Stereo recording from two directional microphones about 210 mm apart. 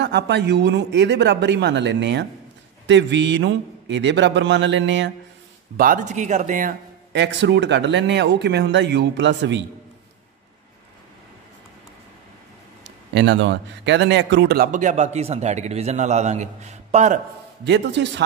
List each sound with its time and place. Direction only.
0.0 s speech: 55° right (ahead or behind)
5.8 s a man's voice: 40° right (ahead or behind)
7.1 s speech: 55° right (ahead or behind)
12.8 s a man's voice: 55° right (ahead or behind); by 17.2 s 35° right (ahead or behind)
17.6 s speech: 55° right (ahead or behind)